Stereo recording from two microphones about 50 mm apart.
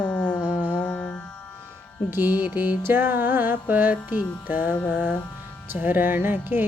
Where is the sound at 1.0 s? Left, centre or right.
Centre.